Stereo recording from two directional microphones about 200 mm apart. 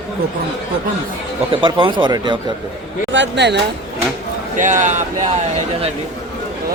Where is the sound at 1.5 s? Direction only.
25° right (ahead or behind).